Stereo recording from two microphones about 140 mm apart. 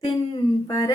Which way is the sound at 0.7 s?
30° left (ahead or behind).